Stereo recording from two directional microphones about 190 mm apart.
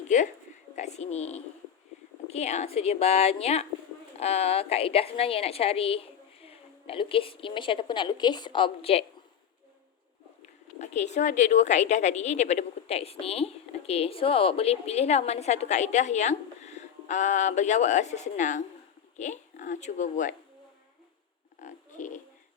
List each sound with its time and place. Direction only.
0.1 s speech: 40° left (ahead or behind)
10.4 s speech: 35° left (ahead or behind)
21.6 s a sound: 40° left (ahead or behind)